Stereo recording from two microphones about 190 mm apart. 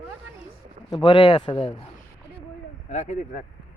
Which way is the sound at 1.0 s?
25° left (ahead or behind).